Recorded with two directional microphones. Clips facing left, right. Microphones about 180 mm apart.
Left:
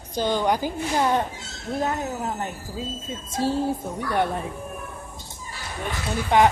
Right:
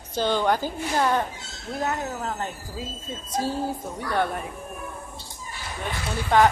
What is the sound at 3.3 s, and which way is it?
Speech, 25° left (ahead or behind).